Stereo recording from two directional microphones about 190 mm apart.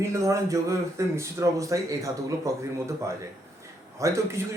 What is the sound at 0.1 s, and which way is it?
A man's voice, 15° right (ahead or behind).